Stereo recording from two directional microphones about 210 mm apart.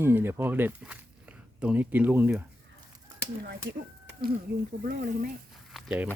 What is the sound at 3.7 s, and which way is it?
Speech, 45° right (ahead or behind).